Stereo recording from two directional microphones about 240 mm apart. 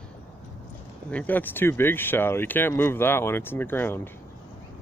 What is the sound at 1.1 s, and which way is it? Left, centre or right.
Speech, centre.